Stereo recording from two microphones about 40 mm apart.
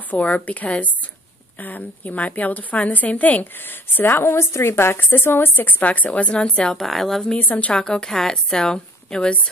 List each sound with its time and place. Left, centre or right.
0.1 s a woman's voice: left
2.0 s a woman's voice: left
3.5 s a woman's voice: left
5.1 s a woman's voice: left
5.6 s a woman's voice: left
6.3 s speech: left
6.9 s speech: centre
7.3 s speech: left
7.7 s speech: left